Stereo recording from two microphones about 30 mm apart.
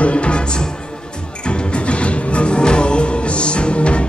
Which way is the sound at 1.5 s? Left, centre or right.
Left.